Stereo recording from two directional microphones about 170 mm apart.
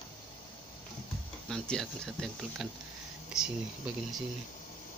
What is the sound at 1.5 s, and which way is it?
Speech, 5° left (ahead or behind).